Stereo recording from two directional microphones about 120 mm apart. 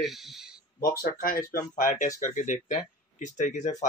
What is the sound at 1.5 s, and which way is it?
Speech, 90° left.